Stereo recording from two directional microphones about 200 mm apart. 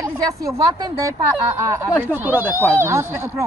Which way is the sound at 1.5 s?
15° right (ahead or behind).